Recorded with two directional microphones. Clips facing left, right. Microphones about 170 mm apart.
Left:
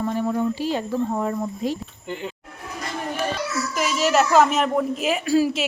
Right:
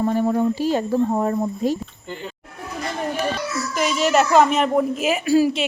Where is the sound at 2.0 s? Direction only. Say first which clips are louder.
Left 3 dB; 15° left (ahead or behind).